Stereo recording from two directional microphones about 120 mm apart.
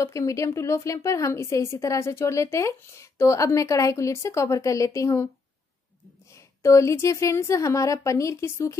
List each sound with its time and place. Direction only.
0.0 s a woman's voice: 25° left (ahead or behind)
6.3 s a woman's voice: 25° left (ahead or behind)